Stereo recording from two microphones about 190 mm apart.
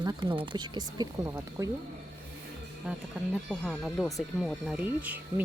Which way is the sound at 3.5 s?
Centre (ahead or behind).